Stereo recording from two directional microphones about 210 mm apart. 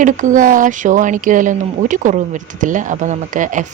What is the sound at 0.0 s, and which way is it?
Speech, 40° right (ahead or behind).